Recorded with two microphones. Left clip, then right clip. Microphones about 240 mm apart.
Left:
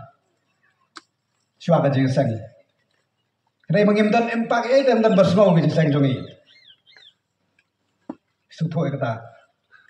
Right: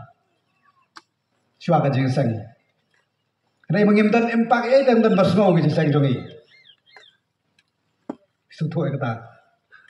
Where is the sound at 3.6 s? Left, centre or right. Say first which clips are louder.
Even; left.